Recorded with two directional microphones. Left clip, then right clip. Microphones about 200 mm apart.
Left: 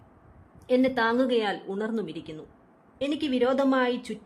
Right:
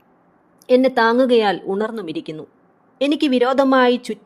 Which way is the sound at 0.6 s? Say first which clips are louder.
Right 9 dB; 35° right (ahead or behind).